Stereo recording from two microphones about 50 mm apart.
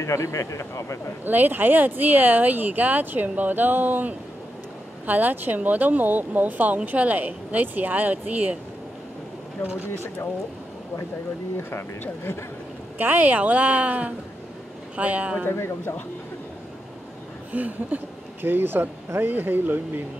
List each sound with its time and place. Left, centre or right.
0.0 s speech: left
1.2 s speech: right
11.5 s speech: left
12.9 s speech: right
15.0 s a sound: right
17.5 s a sound: right
18.4 s speech: right